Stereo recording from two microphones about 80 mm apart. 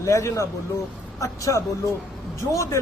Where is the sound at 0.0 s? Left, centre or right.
Left.